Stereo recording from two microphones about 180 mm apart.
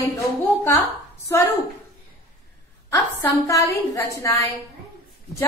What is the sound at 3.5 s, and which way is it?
A woman's voice, 20° left (ahead or behind).